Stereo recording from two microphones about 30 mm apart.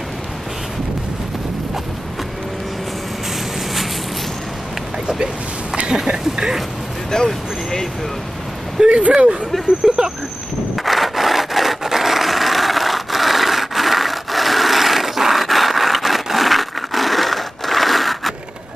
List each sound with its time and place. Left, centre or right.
6.1 s a sound: right
7.1 s speech: centre
8.7 s speech: right
9.8 s speech: right
10.8 s sawing: centre
11.8 s a sound: centre